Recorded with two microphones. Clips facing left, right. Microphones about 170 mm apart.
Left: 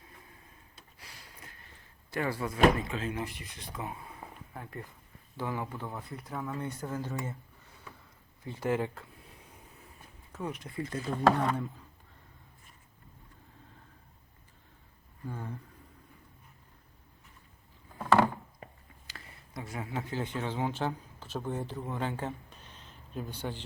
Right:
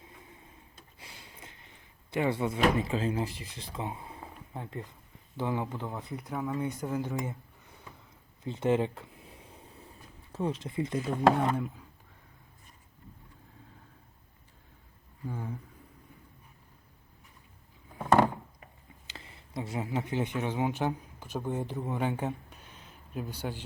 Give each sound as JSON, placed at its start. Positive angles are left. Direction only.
{"t": 0.9, "sound": "a sound", "side_deg": -25}
{"t": 2.8, "sound": "speech", "side_deg": -30}
{"t": 8.4, "sound": "a sound", "side_deg": -20}
{"t": 10.3, "sound": "speech", "side_deg": -30}
{"t": 15.3, "sound": "speech", "side_deg": -10}
{"t": 19.0, "sound": "speech", "side_deg": -25}